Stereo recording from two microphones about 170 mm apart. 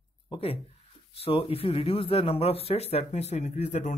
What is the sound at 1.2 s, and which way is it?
A man's voice, 35° left (ahead or behind).